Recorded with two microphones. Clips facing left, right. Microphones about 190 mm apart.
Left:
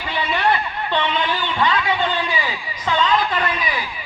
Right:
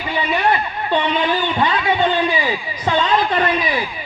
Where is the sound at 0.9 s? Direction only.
15° right (ahead or behind).